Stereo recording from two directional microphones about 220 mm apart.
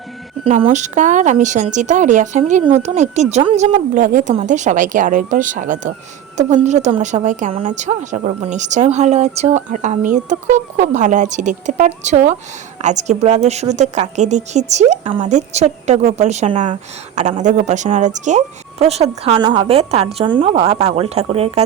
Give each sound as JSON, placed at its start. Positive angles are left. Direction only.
{"t": 0.4, "sound": "a woman's voice", "side_deg": -30}